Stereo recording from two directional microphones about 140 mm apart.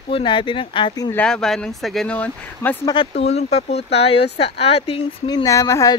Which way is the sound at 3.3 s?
50° left (ahead or behind).